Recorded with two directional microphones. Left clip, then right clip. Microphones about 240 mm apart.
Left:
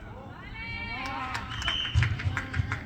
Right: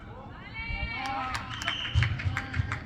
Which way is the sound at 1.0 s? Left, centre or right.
Right.